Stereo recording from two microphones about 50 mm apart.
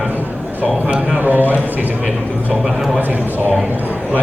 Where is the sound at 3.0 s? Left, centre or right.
Right.